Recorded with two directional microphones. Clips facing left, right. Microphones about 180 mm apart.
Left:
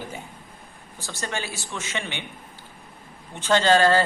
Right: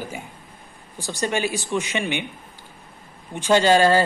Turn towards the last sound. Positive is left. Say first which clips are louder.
# right 2 dB
turn(degrees=-15)  # may be behind; listen again after turning